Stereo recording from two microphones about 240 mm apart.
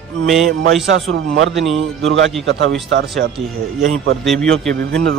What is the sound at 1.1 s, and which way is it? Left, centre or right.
Speech, right.